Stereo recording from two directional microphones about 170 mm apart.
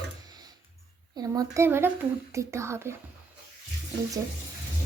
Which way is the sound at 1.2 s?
20° right (ahead or behind).